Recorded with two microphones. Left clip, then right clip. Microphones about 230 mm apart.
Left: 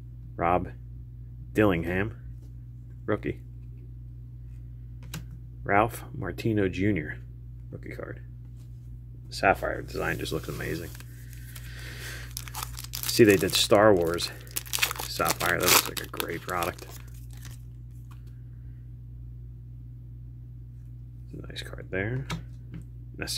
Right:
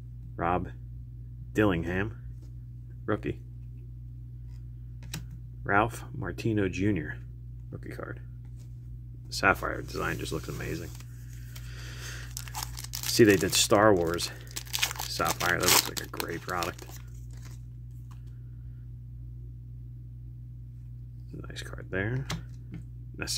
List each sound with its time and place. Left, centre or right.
0.4 s speech: centre
5.6 s speech: centre
9.3 s speech: centre
11.7 s a sound: centre
12.4 s speech: centre
21.3 s a sound: centre
22.2 s computer keyboard: right
23.2 s speech: centre